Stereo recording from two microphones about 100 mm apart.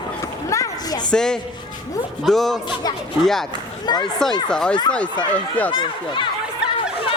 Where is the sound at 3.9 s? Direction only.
45° left (ahead or behind).